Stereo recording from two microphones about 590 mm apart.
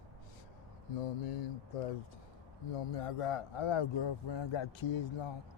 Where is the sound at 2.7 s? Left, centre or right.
Left.